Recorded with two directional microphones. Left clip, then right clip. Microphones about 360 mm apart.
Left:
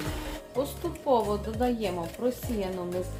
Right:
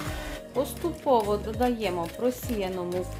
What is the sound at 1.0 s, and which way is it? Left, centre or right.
Speech, centre.